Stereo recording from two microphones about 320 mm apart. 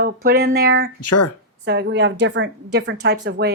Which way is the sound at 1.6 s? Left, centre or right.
Right.